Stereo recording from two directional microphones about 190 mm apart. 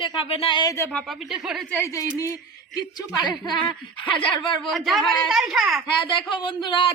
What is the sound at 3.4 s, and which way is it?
Speech, 25° left (ahead or behind).